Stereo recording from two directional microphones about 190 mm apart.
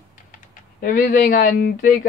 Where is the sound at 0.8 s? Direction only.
45° left (ahead or behind).